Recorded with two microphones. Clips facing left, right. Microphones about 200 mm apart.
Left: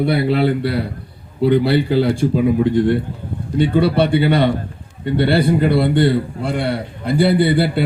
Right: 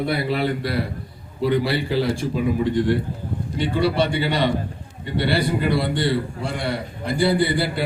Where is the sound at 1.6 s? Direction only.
60° left (ahead or behind).